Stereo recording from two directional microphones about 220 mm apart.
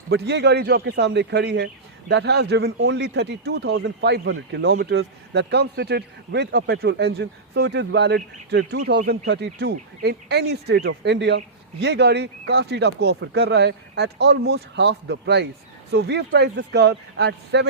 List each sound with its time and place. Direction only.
0.1 s a man's voice: 50° right (ahead or behind)